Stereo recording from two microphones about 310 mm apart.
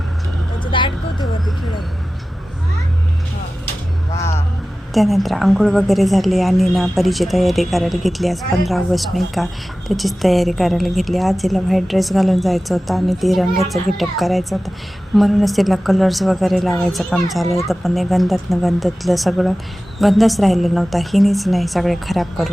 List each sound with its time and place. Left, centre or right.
0.6 s vehicle: centre
4.9 s a woman's voice: centre